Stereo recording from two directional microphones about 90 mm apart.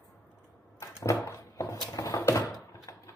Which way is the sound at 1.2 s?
35° left (ahead or behind).